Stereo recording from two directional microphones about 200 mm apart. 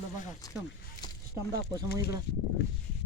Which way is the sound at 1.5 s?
50° left (ahead or behind).